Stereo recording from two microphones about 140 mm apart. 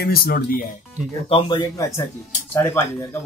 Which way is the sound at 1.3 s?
35° left (ahead or behind).